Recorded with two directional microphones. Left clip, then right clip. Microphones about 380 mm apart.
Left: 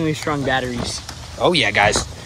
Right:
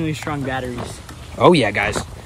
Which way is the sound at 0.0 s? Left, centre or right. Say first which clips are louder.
Left 3 dB; centre.